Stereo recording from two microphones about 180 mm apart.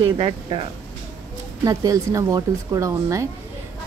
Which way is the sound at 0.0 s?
30° right (ahead or behind).